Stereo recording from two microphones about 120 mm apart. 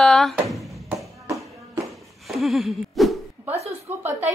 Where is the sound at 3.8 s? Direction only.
15° right (ahead or behind).